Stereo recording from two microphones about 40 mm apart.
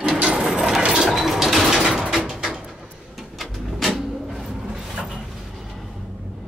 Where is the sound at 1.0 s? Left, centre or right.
Centre.